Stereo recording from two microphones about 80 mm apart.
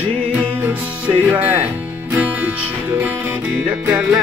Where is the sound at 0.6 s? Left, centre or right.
Right.